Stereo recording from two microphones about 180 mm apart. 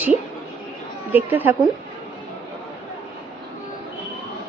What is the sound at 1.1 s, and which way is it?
Speech, 10° right (ahead or behind).